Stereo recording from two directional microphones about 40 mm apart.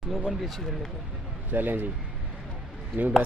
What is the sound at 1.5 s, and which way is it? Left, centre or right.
Speech, right.